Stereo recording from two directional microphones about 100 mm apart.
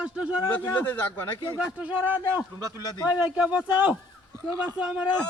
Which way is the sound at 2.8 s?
40° left (ahead or behind).